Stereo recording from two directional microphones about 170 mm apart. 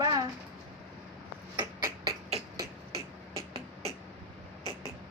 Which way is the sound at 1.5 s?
20° right (ahead or behind).